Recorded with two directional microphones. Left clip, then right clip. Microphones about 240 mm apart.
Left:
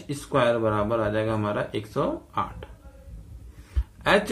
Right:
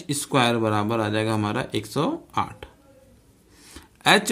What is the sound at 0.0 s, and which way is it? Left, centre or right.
Speech, right.